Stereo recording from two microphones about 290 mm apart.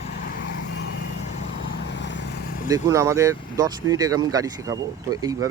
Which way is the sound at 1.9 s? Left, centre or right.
Left.